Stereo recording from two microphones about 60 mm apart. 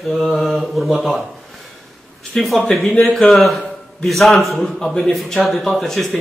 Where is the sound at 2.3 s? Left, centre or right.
Centre.